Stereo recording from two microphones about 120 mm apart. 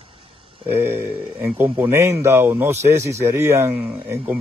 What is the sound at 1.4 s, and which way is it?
Speech, 20° right (ahead or behind).